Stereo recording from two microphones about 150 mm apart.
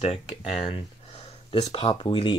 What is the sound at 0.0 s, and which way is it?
Speech, 40° left (ahead or behind).